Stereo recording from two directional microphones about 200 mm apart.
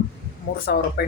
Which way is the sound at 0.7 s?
50° left (ahead or behind).